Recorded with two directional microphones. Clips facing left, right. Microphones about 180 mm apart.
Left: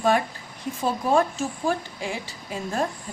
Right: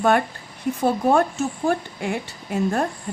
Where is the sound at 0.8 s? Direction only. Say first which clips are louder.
Right 3 dB; 65° right (ahead or behind).